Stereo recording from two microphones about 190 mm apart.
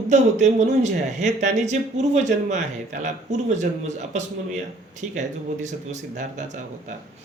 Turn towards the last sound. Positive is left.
turn(degrees=-40)  # may be behind; listen again after turning